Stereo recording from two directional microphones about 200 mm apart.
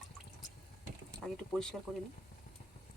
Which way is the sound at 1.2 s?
5° left (ahead or behind).